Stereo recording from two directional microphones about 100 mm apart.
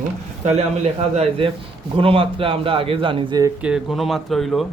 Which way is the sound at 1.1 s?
75° right (ahead or behind).